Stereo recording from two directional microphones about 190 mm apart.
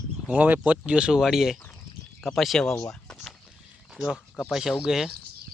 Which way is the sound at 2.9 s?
5° left (ahead or behind).